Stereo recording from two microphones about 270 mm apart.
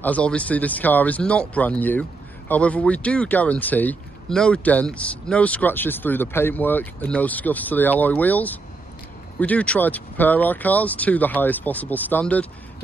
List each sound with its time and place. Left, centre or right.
0.0 s speech: centre